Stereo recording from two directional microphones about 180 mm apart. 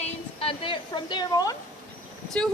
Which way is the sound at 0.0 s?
30° left (ahead or behind).